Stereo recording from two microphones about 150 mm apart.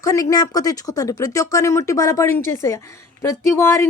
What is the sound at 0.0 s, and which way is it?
Speech, 20° left (ahead or behind).